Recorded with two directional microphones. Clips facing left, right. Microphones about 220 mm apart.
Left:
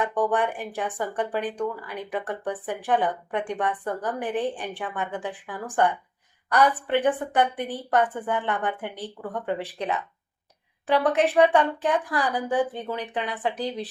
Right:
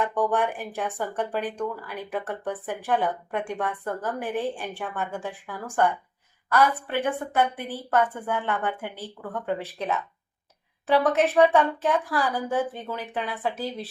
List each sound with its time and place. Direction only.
0.0 s speech: 15° left (ahead or behind)
10.8 s speech: 15° left (ahead or behind)